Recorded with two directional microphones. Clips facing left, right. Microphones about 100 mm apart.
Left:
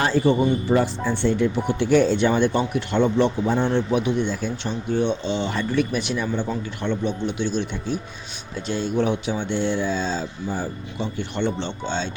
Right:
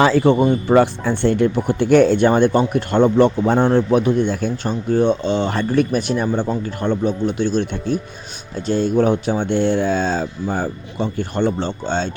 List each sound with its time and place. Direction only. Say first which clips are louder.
0.0 s speech: right 5 dB; 85° right; by 12.1 s 45° right (ahead or behind)